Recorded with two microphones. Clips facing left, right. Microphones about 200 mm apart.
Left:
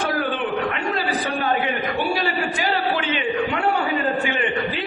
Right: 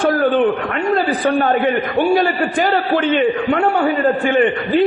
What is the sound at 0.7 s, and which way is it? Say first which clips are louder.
A man's voice: right 7 dB; 50° right (ahead or behind).